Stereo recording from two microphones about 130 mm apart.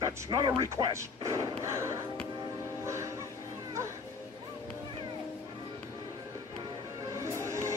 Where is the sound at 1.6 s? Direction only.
20° right (ahead or behind).